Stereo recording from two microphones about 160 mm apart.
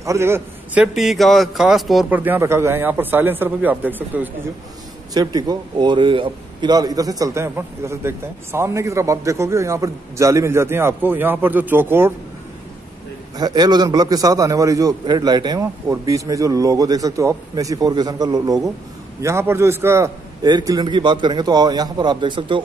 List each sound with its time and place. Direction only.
0.0 s a man's voice: 15° right (ahead or behind)
0.9 s speech: centre (ahead or behind)
2.1 s speech: 10° right (ahead or behind)
5.1 s a man's voice: 25° right (ahead or behind)
13.4 s a man's voice: 25° right (ahead or behind)